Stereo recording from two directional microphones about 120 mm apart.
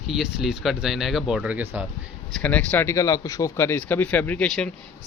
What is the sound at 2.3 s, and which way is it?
Speech, 10° left (ahead or behind).